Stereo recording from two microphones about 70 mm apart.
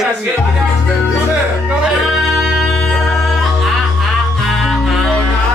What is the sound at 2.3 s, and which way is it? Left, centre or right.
Music, centre.